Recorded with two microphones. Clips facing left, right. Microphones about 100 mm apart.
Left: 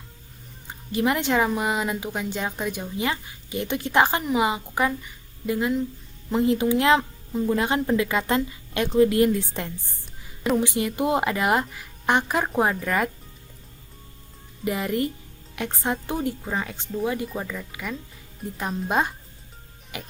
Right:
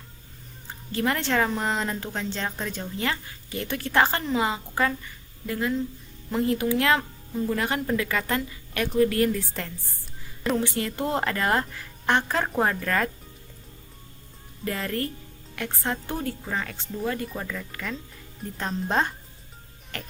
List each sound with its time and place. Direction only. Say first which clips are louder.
0.7 s speech: left 3 dB; 15° left (ahead or behind)
14.6 s speech: left 4 dB; 15° left (ahead or behind)